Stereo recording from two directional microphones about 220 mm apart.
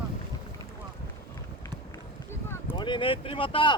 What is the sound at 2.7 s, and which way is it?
Speech, 20° left (ahead or behind).